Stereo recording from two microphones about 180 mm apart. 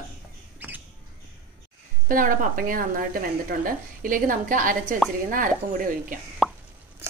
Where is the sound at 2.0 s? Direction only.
50° right (ahead or behind).